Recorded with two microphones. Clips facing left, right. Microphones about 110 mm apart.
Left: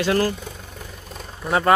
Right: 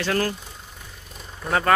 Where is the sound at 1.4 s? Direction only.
20° left (ahead or behind).